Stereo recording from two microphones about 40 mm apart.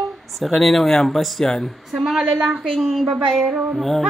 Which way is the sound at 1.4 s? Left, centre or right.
Centre.